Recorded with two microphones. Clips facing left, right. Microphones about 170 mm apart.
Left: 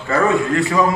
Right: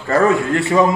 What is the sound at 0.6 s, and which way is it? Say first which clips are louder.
Speech: right 2 dB; 25° right (ahead or behind).